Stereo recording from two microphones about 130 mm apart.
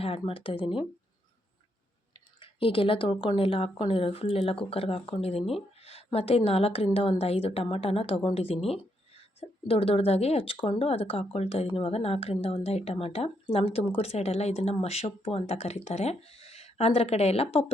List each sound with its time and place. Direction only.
0.0 s speech: 50° left (ahead or behind)
2.4 s speech: 40° left (ahead or behind)